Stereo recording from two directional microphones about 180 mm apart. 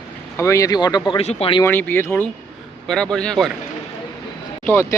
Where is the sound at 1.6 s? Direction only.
15° left (ahead or behind).